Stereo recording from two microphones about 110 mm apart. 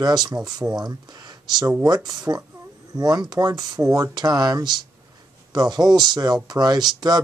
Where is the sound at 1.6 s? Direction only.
35° right (ahead or behind).